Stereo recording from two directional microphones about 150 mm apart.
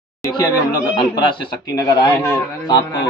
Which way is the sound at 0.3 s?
25° left (ahead or behind).